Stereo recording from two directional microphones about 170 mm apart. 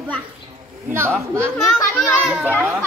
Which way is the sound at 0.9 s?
15° right (ahead or behind).